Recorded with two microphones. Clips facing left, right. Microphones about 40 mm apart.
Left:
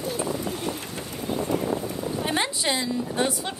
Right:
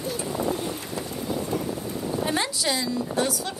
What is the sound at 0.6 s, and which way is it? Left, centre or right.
Boat, left.